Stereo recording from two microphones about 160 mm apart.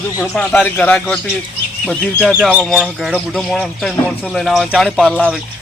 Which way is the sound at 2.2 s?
10° right (ahead or behind).